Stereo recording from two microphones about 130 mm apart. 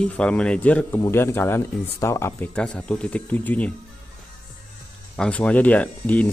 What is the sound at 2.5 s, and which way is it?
Speech, 10° left (ahead or behind).